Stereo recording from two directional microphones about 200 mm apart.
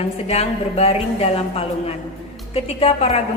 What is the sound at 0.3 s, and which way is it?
A woman's voice, 30° left (ahead or behind).